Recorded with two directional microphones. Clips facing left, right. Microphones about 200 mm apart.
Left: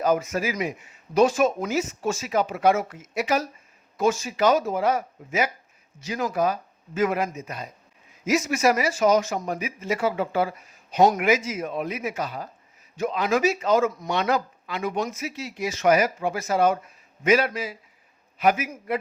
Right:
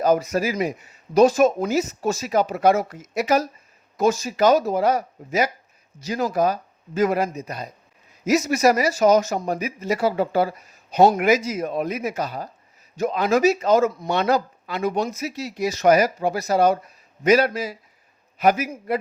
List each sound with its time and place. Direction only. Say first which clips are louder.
0.0 s speech: right 3 dB; 40° right (ahead or behind)